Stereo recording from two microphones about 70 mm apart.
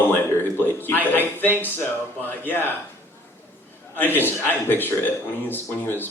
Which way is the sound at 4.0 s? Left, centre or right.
Left.